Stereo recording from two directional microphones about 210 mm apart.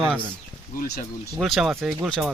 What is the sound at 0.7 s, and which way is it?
Speech, 45° left (ahead or behind).